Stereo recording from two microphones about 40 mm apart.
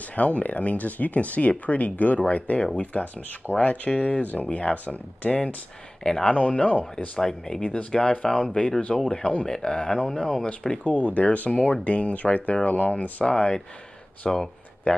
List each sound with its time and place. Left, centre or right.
0.1 s speech: left
6.0 s speech: centre
6.3 s speech: left
7.2 s speech: centre
8.5 s speech: left
10.8 s speech: left
13.2 s speech: left
14.9 s speech: left